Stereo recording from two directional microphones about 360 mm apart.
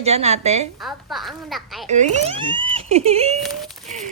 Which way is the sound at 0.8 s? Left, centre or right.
Centre.